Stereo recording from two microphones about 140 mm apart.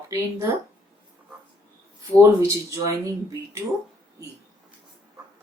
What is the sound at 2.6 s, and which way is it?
Speech, 20° right (ahead or behind).